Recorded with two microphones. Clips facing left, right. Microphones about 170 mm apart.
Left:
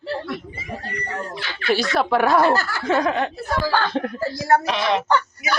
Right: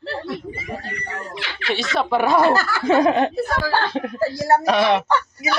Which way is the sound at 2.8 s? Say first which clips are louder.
Right 4 dB; 10° right (ahead or behind).